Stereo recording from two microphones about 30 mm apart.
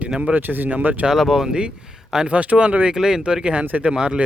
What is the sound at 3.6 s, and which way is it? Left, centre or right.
Speech, right.